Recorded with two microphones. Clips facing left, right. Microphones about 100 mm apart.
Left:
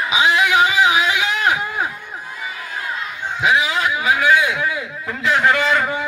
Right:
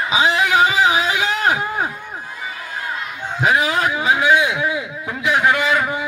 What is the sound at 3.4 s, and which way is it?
Speech, 45° right (ahead or behind).